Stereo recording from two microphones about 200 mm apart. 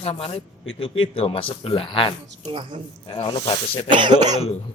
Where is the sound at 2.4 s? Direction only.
25° right (ahead or behind).